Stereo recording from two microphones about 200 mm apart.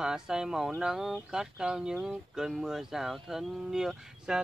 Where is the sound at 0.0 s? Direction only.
5° right (ahead or behind).